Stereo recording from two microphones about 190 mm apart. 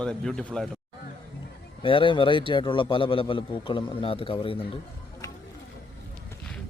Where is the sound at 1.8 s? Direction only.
25° left (ahead or behind).